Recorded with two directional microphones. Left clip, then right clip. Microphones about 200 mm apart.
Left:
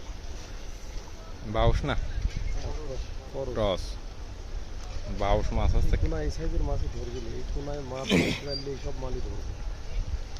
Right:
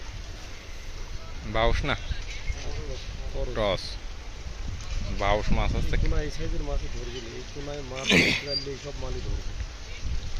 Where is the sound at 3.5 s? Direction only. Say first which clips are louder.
Right 2 dB; 10° left (ahead or behind).